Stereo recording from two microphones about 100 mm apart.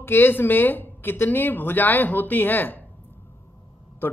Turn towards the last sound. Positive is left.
turn(degrees=20)  # may be behind; listen again after turning